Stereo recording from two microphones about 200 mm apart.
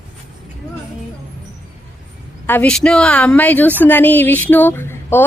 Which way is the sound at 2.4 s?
10° left (ahead or behind).